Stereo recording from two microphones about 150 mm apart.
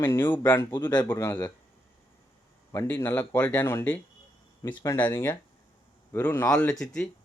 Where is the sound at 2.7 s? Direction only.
15° left (ahead or behind).